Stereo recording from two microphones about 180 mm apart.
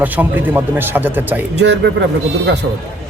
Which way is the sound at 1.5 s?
70° right (ahead or behind).